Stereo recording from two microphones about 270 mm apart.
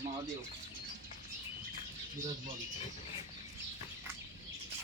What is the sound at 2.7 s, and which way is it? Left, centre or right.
Vehicle, left.